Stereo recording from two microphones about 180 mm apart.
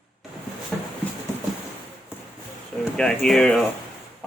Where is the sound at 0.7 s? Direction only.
5° left (ahead or behind).